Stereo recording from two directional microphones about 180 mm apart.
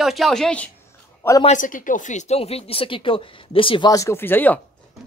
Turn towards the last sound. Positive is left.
turn(degrees=10)  # may be behind; listen again after turning